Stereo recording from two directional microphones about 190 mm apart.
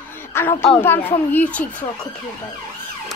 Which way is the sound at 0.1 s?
10° left (ahead or behind).